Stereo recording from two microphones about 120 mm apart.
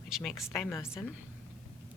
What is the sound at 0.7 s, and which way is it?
Speech, 20° left (ahead or behind).